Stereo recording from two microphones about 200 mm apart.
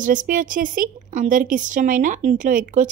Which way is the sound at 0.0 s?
40° right (ahead or behind).